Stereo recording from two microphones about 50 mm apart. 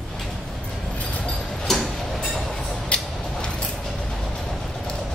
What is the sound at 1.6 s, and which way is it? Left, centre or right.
Tick-tock, centre.